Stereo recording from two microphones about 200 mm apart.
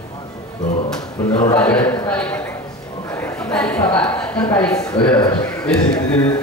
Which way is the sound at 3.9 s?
5° left (ahead or behind).